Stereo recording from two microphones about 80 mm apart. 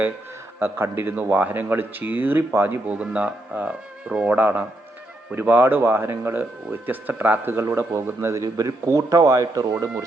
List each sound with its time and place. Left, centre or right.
0.6 s a man's voice: right
8.4 s a man's voice: right